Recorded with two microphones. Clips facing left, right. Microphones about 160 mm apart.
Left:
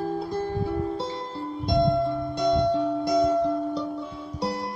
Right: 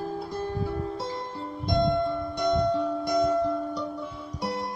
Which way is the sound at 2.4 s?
25° left (ahead or behind).